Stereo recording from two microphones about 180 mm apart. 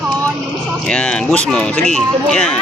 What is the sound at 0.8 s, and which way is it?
Speech, 5° left (ahead or behind).